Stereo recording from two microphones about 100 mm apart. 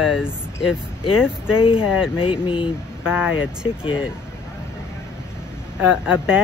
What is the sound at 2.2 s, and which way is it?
Speech, 60° left (ahead or behind).